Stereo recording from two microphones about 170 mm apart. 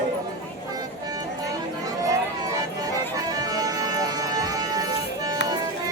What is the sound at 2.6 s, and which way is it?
Music, 20° right (ahead or behind).